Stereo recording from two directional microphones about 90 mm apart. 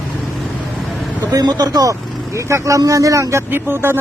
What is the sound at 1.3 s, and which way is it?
Speech, 45° right (ahead or behind).